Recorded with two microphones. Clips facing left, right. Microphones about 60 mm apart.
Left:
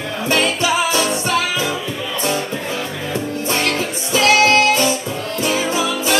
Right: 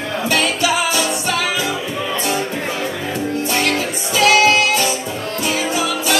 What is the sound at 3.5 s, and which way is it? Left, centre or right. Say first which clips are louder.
Music: left 1 dB; right.